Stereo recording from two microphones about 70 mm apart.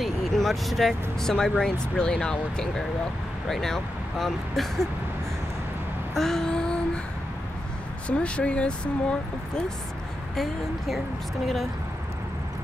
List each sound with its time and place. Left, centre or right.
0.0 s speech: centre
6.1 s a sound: centre
8.1 s speech: centre
10.3 s speech: centre